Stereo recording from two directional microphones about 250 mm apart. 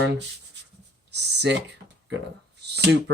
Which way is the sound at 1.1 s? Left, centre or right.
Right.